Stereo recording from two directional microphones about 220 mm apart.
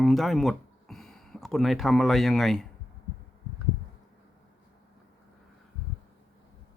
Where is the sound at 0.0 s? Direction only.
Centre (ahead or behind).